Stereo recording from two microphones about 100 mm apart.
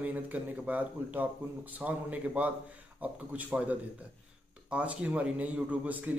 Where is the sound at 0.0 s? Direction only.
15° right (ahead or behind).